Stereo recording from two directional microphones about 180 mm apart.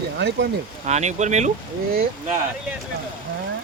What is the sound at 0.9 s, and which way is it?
Speech, 40° right (ahead or behind).